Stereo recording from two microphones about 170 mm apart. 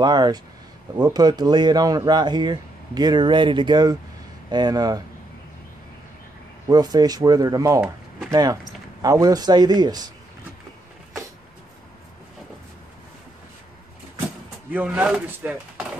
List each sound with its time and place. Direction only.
0.0 s speech: 25° right (ahead or behind)
6.7 s speech: 25° right (ahead or behind)
14.7 s speech: 10° right (ahead or behind)